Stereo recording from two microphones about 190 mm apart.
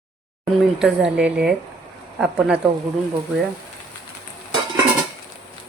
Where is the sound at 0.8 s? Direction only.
5° right (ahead or behind).